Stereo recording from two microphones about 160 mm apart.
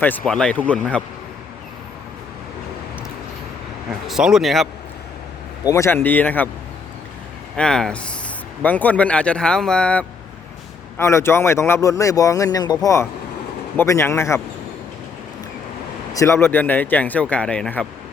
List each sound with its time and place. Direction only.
0.0 s speech: 10° left (ahead or behind)
4.0 s speech: centre (ahead or behind)
5.6 s speech: 20° left (ahead or behind)
7.5 s speech: 5° left (ahead or behind)
16.1 s speech: 15° left (ahead or behind)